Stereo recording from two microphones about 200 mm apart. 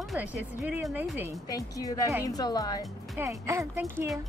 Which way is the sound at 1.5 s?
15° left (ahead or behind).